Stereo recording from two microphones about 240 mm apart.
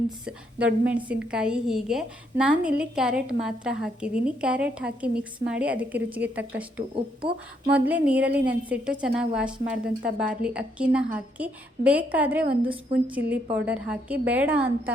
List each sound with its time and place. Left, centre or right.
0.3 s a woman's voice: centre
6.9 s speech: right
7.7 s a woman's voice: centre